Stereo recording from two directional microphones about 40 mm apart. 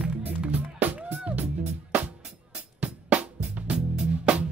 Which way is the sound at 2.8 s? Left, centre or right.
Right.